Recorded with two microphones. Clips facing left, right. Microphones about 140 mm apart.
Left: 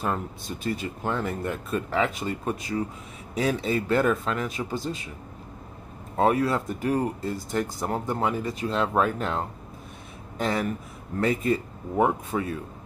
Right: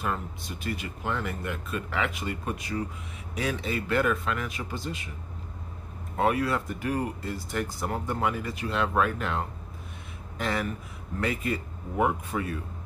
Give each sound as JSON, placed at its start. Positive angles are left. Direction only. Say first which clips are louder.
{"t": 0.7, "sound": "speech", "louder": "left 4 dB", "side_deg": 30}
{"t": 6.1, "sound": "speech", "louder": "left 3 dB", "side_deg": 30}